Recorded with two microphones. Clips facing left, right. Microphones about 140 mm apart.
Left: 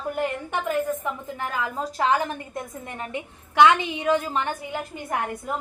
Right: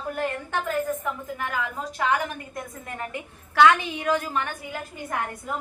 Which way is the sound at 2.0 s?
30° left (ahead or behind).